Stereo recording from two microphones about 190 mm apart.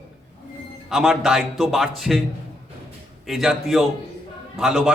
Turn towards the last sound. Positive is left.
turn(degrees=-5)  # may be behind; listen again after turning